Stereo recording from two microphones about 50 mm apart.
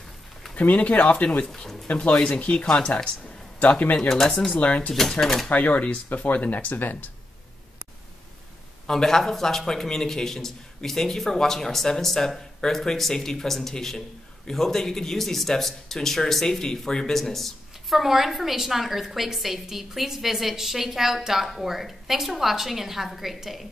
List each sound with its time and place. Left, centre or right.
0.6 s speech: left
1.4 s a man's voice: centre
1.9 s speech: left
2.1 s a man's voice: centre
4.1 s a man's voice: centre
4.6 s speech: left
5.2 s speech: centre
5.5 s speech: left
8.8 s a man's voice: centre